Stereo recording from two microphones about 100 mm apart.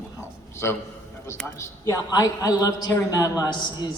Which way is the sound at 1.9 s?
35° left (ahead or behind).